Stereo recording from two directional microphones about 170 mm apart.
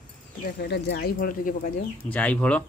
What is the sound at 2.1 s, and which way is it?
Speech, 10° left (ahead or behind).